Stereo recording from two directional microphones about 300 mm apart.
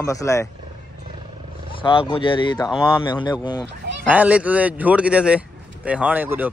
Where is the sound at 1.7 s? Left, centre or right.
Centre.